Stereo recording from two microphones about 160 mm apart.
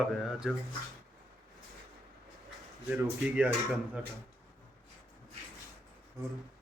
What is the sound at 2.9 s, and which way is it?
Speech, 10° right (ahead or behind).